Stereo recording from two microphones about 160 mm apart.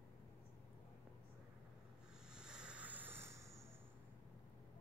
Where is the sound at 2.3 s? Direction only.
5° right (ahead or behind).